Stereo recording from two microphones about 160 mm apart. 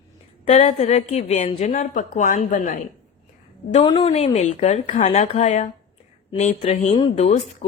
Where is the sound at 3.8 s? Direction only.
35° left (ahead or behind).